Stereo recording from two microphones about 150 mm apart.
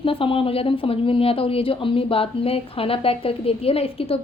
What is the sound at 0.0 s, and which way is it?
Speech, 35° left (ahead or behind).